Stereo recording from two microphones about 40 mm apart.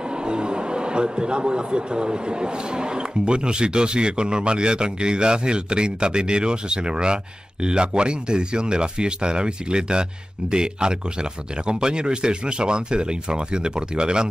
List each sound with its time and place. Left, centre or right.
0.1 s a man's voice: right